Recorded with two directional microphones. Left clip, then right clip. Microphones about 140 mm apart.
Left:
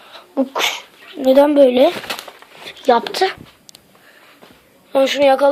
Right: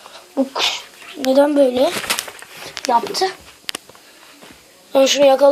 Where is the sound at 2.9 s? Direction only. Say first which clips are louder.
Left 3 dB; 60° left (ahead or behind).